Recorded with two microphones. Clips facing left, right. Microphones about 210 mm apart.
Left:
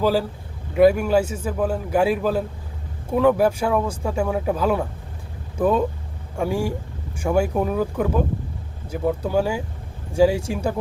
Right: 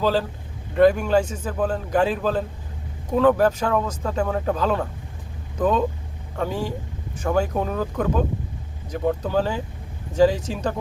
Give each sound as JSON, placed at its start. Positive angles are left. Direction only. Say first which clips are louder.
{"t": 0.0, "sound": "speech", "louder": "left 2 dB", "side_deg": 10}